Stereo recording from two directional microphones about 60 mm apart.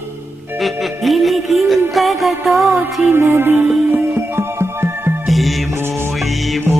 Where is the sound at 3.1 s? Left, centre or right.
Right.